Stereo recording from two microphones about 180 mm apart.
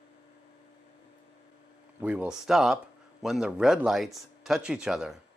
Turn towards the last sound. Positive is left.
turn(degrees=-5)  # may be behind; listen again after turning